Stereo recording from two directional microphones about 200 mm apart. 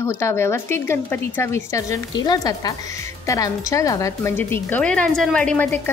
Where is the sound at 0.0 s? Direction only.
10° left (ahead or behind).